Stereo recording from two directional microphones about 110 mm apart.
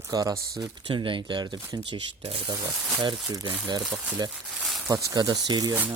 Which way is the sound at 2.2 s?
60° right (ahead or behind).